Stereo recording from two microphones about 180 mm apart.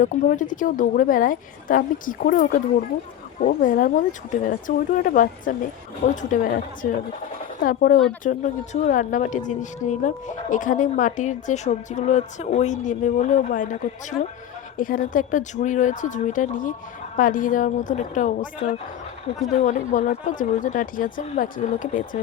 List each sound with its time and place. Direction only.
0.0 s a woman's voice: 45° left (ahead or behind)
7.6 s a woman's voice: 50° left (ahead or behind)
19.5 s a woman's voice: 45° left (ahead or behind)